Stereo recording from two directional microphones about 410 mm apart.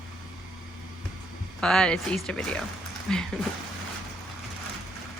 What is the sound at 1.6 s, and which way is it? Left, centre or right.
A woman's voice, centre.